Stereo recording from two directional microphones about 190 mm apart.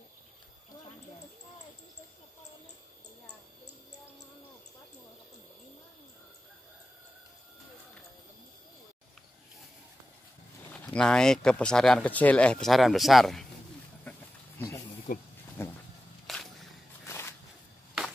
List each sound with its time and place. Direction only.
10.7 s speech: 5° left (ahead or behind)
14.6 s snake: 15° left (ahead or behind)
15.1 s speech: 45° left (ahead or behind)
15.6 s a sound: 15° left (ahead or behind)
16.3 s walk: centre (ahead or behind)
17.0 s a sound: 15° left (ahead or behind)